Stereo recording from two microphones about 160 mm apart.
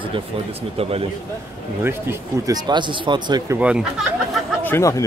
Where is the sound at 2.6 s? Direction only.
30° right (ahead or behind).